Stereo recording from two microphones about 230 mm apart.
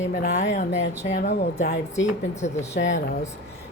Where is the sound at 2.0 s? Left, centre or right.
Left.